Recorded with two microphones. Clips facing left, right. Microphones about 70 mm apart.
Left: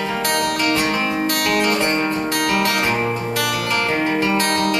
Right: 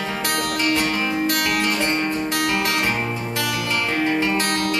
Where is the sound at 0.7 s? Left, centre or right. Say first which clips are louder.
Left 2 dB; centre.